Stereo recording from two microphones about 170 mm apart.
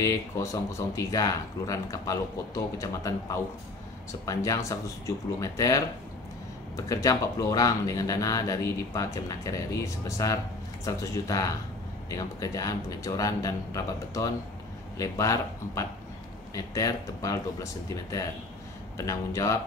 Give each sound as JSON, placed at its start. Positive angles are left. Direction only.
{"t": 0.0, "sound": "speech", "side_deg": 20}
{"t": 6.9, "sound": "speech", "side_deg": 20}
{"t": 18.9, "sound": "speech", "side_deg": 15}